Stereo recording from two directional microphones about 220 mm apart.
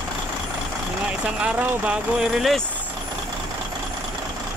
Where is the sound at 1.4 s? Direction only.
5° right (ahead or behind).